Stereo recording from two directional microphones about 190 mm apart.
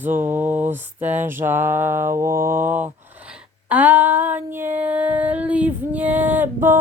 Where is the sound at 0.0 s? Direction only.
10° right (ahead or behind).